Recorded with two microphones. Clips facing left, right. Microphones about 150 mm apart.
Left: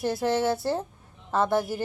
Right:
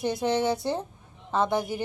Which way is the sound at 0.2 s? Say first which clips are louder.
Even; 20° right (ahead or behind).